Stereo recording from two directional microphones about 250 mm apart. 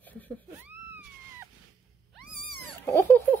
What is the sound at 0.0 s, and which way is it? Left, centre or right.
Cat, centre.